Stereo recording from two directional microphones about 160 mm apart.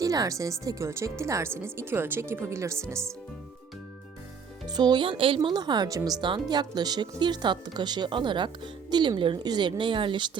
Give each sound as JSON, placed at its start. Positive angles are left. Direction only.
{"t": 0.0, "sound": "speech", "side_deg": -20}
{"t": 4.7, "sound": "speech", "side_deg": -25}